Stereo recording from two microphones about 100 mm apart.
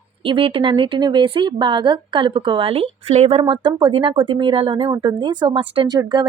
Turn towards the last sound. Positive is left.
turn(degrees=-45)  # may be behind; listen again after turning